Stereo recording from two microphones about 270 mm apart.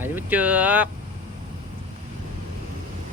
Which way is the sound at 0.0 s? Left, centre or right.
Centre.